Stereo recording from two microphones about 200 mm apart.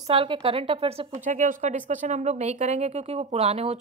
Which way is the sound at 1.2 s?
40° right (ahead or behind).